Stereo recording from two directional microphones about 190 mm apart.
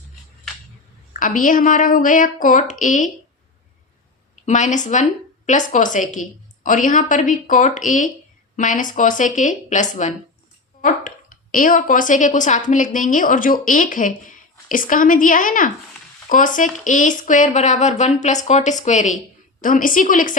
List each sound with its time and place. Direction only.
1.1 s a woman's voice: 45° left (ahead or behind)
4.4 s a woman's voice: 40° left (ahead or behind)